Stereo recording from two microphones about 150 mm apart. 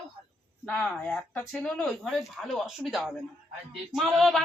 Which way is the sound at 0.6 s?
10° left (ahead or behind).